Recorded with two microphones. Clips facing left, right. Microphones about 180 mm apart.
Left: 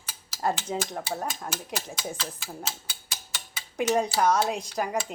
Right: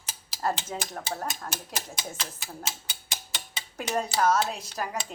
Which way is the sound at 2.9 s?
20° right (ahead or behind).